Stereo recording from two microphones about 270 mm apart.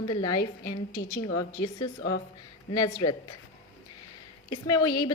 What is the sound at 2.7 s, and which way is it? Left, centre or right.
Speech, centre.